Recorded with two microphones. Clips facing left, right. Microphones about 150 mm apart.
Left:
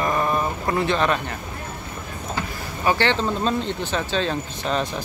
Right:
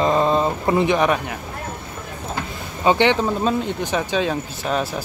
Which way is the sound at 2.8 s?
15° right (ahead or behind).